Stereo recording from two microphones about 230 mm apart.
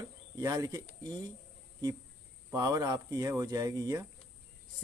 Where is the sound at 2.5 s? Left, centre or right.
Centre.